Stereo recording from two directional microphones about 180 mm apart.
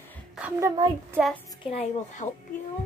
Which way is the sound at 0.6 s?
20° right (ahead or behind).